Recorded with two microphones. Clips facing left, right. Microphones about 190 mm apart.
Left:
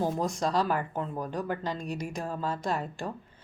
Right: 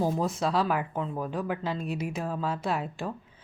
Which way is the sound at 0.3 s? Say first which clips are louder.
Right 1 dB; 5° right (ahead or behind).